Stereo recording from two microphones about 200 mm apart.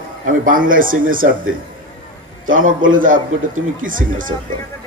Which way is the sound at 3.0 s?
40° right (ahead or behind).